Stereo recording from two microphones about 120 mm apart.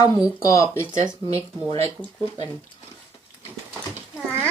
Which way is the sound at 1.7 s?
55° right (ahead or behind).